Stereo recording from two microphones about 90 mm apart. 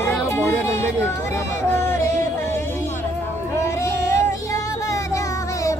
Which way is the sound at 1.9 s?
30° left (ahead or behind).